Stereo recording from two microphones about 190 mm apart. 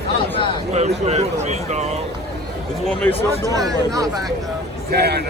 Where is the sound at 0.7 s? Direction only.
35° right (ahead or behind).